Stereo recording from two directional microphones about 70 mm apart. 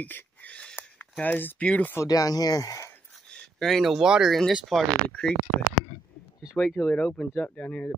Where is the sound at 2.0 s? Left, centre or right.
Left.